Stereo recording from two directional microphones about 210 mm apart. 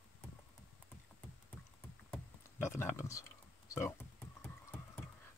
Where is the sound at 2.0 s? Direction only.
10° left (ahead or behind).